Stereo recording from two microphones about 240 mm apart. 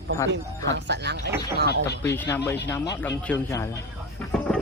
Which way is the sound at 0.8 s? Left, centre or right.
Right.